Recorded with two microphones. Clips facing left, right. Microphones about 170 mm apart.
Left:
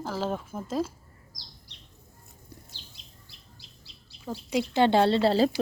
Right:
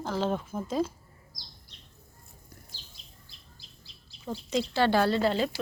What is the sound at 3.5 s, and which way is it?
Bird, 70° left (ahead or behind).